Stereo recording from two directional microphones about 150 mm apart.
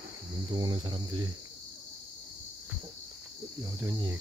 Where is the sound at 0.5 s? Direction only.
30° right (ahead or behind).